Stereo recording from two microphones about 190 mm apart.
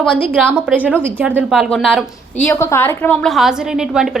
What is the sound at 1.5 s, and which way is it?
Speech, centre (ahead or behind).